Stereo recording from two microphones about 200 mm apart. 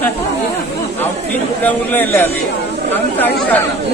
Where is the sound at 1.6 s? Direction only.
10° left (ahead or behind).